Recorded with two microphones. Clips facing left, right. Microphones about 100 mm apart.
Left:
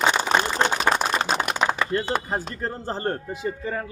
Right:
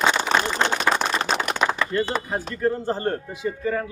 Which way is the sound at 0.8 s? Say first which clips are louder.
Even; 10° left (ahead or behind).